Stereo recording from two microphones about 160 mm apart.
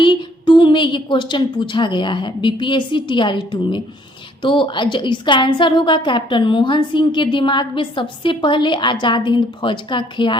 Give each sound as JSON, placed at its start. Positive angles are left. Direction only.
{"t": 0.0, "sound": "a woman's voice", "side_deg": 30}